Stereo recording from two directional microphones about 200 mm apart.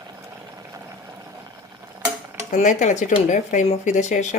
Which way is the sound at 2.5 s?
40° left (ahead or behind).